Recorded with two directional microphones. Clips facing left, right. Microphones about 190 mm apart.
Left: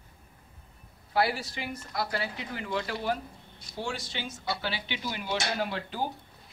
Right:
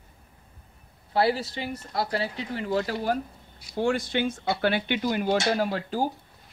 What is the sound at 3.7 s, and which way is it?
Speech, 55° right (ahead or behind).